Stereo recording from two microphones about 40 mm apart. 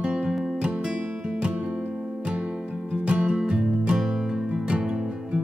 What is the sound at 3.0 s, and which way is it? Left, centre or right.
Music, right.